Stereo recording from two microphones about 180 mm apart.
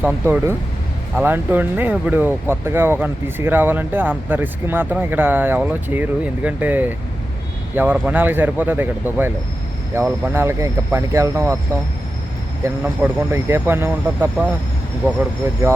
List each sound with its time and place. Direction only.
0.0 s speech: 10° right (ahead or behind)
12.6 s speech: 10° right (ahead or behind)